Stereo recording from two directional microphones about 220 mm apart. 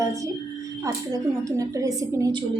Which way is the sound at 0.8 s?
15° right (ahead or behind).